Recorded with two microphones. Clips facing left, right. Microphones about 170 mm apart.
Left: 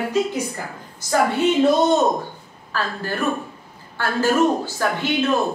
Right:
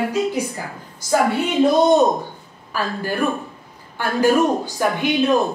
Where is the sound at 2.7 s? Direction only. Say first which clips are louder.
Right 2 dB; 10° right (ahead or behind).